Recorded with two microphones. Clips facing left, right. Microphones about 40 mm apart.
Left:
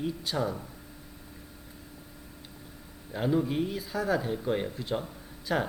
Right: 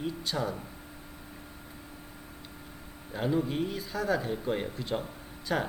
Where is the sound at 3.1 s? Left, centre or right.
Centre.